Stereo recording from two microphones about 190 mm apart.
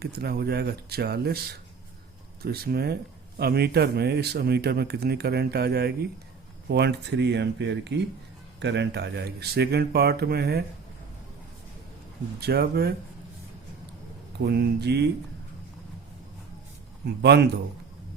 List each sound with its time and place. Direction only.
0.0 s speech: 55° right (ahead or behind)
2.4 s speech: 55° right (ahead or behind)
12.4 s speech: 55° right (ahead or behind)
14.3 s speech: 60° right (ahead or behind)
17.2 s speech: 60° right (ahead or behind)